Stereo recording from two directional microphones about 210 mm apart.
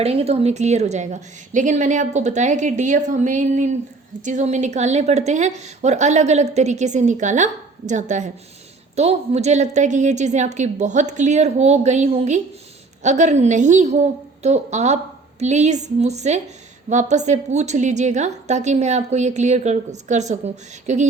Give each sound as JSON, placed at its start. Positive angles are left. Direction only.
{"t": 0.0, "sound": "a woman's voice", "side_deg": -30}